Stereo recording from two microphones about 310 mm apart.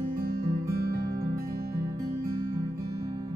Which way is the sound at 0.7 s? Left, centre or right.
Right.